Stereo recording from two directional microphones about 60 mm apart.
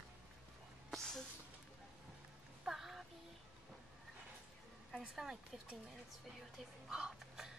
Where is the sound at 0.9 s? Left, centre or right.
Centre.